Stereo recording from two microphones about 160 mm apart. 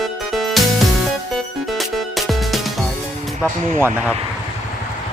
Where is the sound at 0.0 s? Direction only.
Centre (ahead or behind).